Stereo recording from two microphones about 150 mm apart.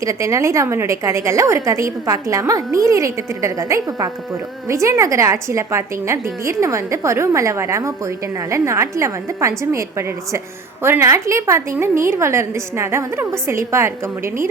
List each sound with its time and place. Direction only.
0.0 s a woman's voice: 20° right (ahead or behind)